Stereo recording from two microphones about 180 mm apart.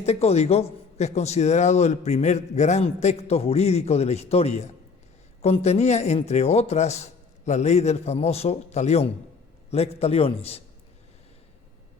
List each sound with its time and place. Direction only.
0.0 s a man's voice: 35° left (ahead or behind)